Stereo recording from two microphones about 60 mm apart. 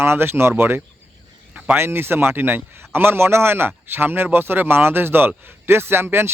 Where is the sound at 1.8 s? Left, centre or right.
Right.